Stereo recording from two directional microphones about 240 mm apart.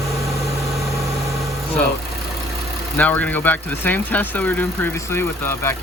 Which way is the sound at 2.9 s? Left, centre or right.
Centre.